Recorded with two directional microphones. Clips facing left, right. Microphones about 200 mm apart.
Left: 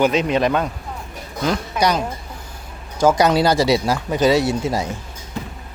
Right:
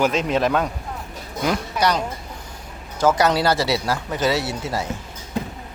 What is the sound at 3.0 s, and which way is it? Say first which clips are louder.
Speech: left 3 dB; 15° left (ahead or behind).